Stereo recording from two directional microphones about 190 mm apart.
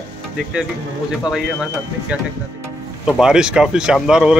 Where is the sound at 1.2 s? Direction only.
Centre (ahead or behind).